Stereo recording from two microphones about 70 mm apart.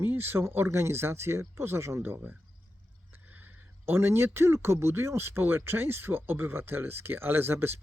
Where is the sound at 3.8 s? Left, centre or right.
Right.